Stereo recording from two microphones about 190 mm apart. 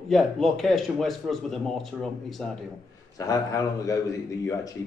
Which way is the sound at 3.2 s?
20° left (ahead or behind).